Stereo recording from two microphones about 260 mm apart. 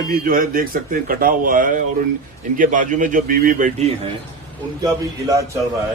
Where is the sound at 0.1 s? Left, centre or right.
Right.